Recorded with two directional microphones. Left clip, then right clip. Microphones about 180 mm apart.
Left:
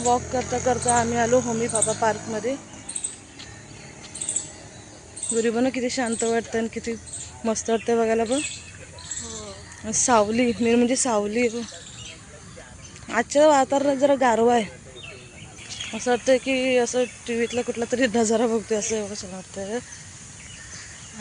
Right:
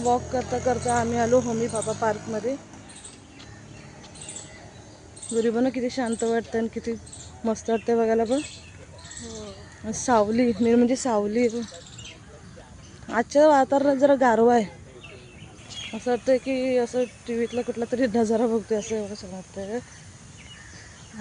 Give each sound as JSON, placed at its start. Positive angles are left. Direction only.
{"t": 0.0, "sound": "speech", "side_deg": 0}
{"t": 5.3, "sound": "speech", "side_deg": -5}
{"t": 9.8, "sound": "speech", "side_deg": -10}
{"t": 13.1, "sound": "speech", "side_deg": -20}
{"t": 15.9, "sound": "speech", "side_deg": 0}